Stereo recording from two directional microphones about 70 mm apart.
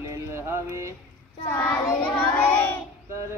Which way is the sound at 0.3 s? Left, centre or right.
Right.